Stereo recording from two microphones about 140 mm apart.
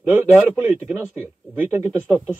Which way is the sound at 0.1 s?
10° right (ahead or behind).